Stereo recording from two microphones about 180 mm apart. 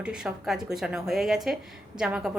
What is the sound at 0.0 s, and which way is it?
A woman's voice, 5° right (ahead or behind).